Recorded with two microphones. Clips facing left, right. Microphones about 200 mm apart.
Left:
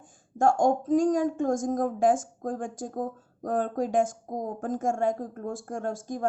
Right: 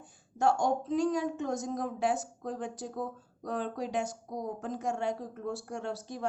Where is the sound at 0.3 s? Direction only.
50° left (ahead or behind).